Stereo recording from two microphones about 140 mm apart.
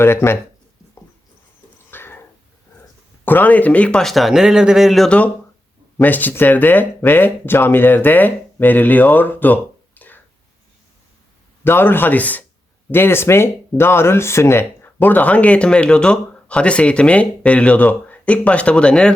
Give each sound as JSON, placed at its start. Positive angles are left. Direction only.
{"t": 0.0, "sound": "speech", "side_deg": 15}
{"t": 1.9, "sound": "a sound", "side_deg": 15}
{"t": 3.2, "sound": "speech", "side_deg": 10}
{"t": 11.6, "sound": "speech", "side_deg": 15}